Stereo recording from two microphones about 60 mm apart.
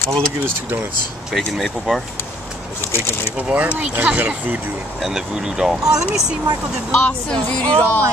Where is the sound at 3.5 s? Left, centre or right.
Right.